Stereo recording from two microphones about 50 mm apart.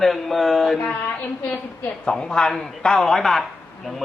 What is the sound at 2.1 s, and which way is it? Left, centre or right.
A man's voice, centre.